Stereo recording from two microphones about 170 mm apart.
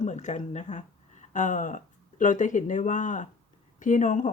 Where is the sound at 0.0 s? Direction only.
45° left (ahead or behind).